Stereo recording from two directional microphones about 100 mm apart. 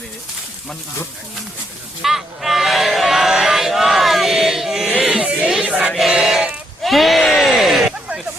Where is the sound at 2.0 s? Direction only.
5° right (ahead or behind).